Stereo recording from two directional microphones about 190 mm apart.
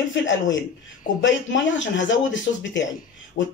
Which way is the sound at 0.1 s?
75° left (ahead or behind).